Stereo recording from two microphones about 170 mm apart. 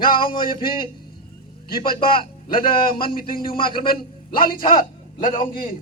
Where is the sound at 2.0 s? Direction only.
60° left (ahead or behind).